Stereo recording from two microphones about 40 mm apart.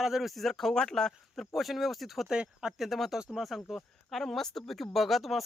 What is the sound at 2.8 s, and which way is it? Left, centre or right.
Speech, centre.